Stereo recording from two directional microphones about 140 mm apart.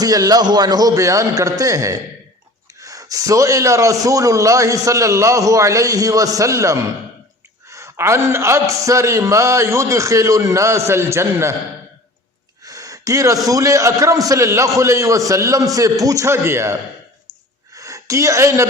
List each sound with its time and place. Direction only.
0.0 s a man's voice: 25° right (ahead or behind)
12.6 s a man's voice: 25° right (ahead or behind)
17.7 s a sound: 25° right (ahead or behind)